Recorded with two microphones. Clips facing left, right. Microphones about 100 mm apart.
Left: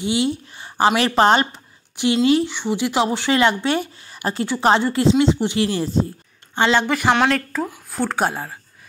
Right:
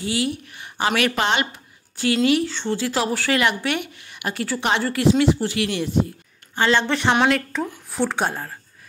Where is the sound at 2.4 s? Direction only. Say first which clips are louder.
Left 2 dB; 15° left (ahead or behind); by 6.1 s 35° left (ahead or behind).